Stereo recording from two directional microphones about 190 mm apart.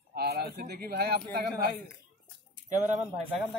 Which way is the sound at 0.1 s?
55° right (ahead or behind).